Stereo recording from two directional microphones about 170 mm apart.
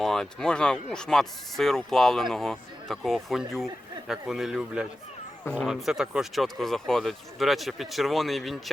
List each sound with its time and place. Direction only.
0.0 s speech: centre (ahead or behind)